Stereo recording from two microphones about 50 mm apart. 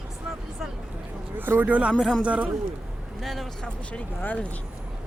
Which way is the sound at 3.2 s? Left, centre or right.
Centre.